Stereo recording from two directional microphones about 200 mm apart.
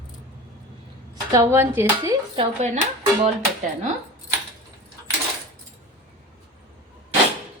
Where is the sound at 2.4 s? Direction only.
35° right (ahead or behind).